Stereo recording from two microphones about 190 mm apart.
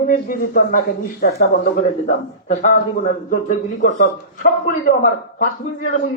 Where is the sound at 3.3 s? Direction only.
40° left (ahead or behind).